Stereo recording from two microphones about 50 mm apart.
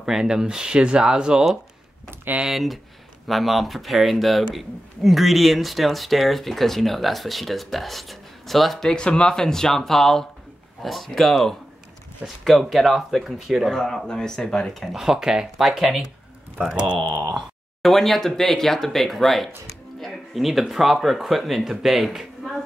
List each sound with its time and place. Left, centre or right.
0.0 s speech: centre
2.4 s speech: centre
15.0 s speech: centre
15.5 s speech: centre
16.5 s speech: centre
17.8 s speech: centre